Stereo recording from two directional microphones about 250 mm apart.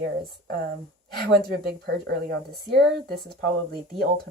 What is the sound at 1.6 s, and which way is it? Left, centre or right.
Speech, right.